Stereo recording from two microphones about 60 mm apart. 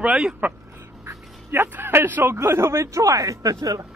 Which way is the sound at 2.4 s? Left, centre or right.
Right.